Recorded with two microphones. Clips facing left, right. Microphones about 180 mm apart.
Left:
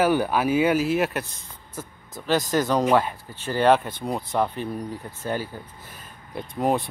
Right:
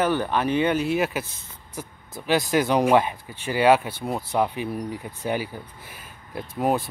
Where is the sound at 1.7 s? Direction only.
10° right (ahead or behind).